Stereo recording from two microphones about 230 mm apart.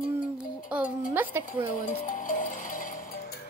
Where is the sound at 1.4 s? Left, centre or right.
Left.